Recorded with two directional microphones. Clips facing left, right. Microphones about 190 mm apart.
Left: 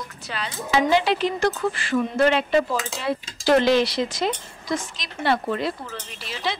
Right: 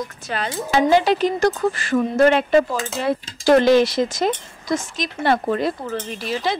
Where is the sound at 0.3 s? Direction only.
50° right (ahead or behind).